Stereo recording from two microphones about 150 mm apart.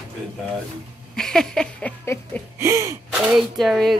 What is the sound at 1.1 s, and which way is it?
Speech, 5° left (ahead or behind).